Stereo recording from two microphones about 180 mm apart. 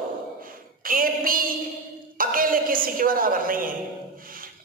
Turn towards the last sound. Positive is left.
turn(degrees=-50)  # may be behind; listen again after turning